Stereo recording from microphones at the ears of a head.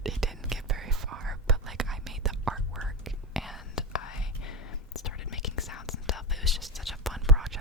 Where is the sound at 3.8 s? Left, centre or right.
Left.